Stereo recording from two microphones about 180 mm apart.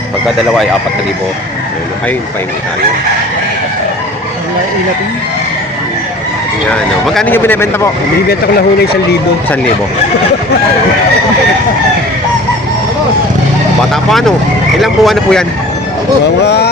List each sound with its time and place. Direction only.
6.7 s speech: 5° left (ahead or behind)
8.3 s speech: 60° left (ahead or behind)
13.9 s speech: centre (ahead or behind)
16.2 s speech: 65° left (ahead or behind)